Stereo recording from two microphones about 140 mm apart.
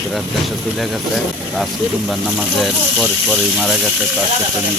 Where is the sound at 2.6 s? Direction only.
Centre (ahead or behind).